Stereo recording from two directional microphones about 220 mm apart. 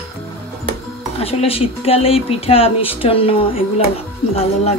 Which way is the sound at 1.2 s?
25° left (ahead or behind).